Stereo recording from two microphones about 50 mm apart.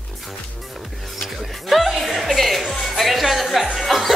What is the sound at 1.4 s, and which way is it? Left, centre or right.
Music, centre.